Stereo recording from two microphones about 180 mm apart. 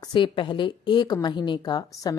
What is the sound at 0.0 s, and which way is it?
A woman's voice, 25° left (ahead or behind).